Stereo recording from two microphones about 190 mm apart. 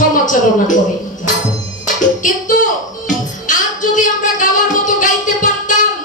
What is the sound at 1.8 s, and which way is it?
Music, 45° left (ahead or behind).